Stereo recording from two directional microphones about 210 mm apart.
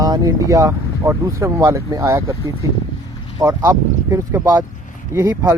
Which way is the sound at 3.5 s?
15° right (ahead or behind).